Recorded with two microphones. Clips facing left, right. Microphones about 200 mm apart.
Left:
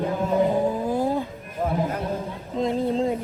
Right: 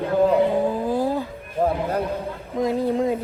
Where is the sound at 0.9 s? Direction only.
20° left (ahead or behind).